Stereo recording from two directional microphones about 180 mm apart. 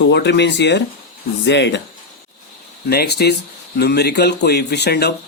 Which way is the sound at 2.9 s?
60° left (ahead or behind).